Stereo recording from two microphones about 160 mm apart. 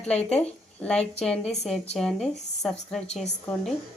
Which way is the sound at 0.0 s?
40° left (ahead or behind).